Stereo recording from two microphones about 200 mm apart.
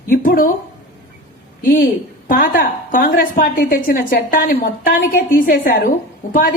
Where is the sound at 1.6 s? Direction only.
45° left (ahead or behind).